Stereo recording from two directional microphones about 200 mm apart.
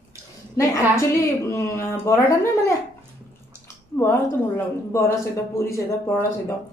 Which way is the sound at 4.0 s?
10° left (ahead or behind).